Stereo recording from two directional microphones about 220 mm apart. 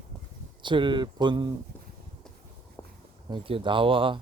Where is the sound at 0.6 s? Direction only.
20° right (ahead or behind).